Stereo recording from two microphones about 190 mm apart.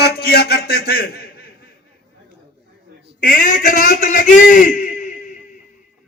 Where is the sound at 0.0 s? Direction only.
55° left (ahead or behind).